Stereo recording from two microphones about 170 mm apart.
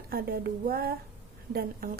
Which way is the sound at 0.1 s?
65° right (ahead or behind).